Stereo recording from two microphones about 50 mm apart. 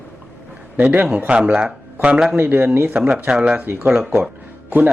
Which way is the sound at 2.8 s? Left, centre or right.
Right.